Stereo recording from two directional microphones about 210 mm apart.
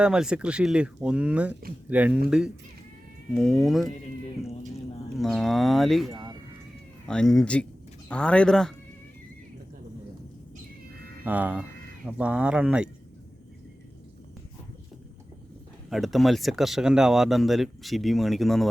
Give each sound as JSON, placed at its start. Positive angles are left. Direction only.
{"t": 0.0, "sound": "speech", "side_deg": -5}
{"t": 3.3, "sound": "speech", "side_deg": 0}
{"t": 5.1, "sound": "speech", "side_deg": 0}
{"t": 11.3, "sound": "speech", "side_deg": -5}
{"t": 15.9, "sound": "speech", "side_deg": 0}